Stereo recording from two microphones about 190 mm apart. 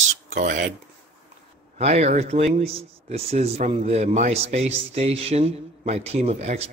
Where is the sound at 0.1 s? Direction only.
45° right (ahead or behind).